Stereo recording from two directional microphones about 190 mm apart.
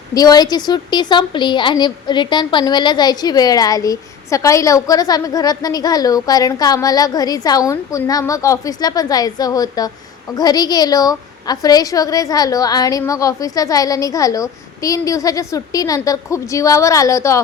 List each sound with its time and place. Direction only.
0.1 s a woman's voice: 20° left (ahead or behind)